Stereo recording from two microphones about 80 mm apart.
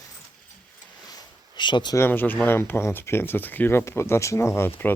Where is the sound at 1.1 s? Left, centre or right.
Left.